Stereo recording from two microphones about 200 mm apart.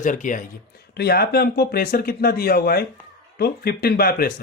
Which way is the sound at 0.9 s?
50° left (ahead or behind).